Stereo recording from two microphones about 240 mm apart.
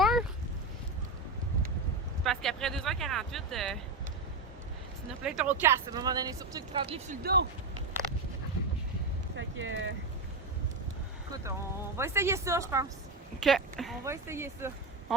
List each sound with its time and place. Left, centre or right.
0.0 s a sound: centre
2.2 s speech: centre
5.2 s speech: centre; by 7.2 s right
7.2 s speech: right
9.3 s a sound: right
11.9 s speech: centre
13.4 s speech: centre
14.0 s speech: centre